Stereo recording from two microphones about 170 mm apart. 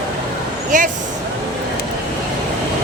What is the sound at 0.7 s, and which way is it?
Speech, 50° right (ahead or behind).